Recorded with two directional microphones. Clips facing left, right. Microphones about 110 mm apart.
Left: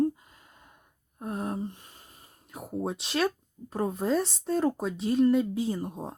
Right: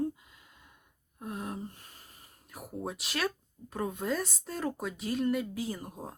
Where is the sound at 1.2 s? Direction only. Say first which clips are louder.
Left 6 dB; 40° left (ahead or behind).